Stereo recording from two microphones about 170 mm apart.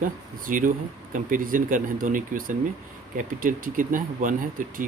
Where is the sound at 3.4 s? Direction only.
55° right (ahead or behind).